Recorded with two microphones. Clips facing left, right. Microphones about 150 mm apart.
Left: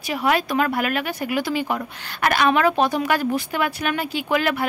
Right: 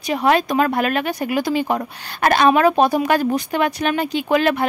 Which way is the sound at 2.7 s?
15° right (ahead or behind).